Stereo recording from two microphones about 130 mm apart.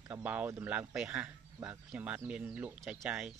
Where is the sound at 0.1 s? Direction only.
10° right (ahead or behind).